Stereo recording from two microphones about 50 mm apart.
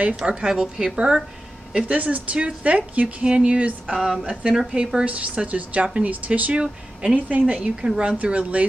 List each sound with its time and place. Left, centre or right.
0.1 s a woman's voice: centre
1.9 s speech: right
6.6 s speech: centre
7.2 s speech: right